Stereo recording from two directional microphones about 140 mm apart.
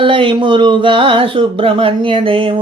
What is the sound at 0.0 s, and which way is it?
Speech, 35° right (ahead or behind).